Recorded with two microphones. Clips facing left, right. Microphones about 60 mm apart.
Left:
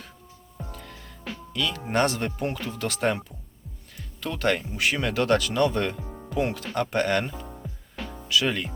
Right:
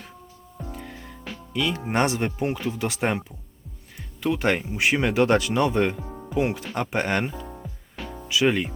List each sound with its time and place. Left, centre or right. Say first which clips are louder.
0.7 s music: right 5 dB; centre
1.5 s speech: right 2 dB; centre
8.0 s music: even; centre
8.3 s speech: right 3 dB; right